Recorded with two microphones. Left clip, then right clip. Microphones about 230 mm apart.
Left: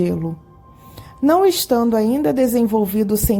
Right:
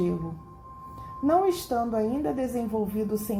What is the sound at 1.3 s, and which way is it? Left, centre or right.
A woman's voice, left.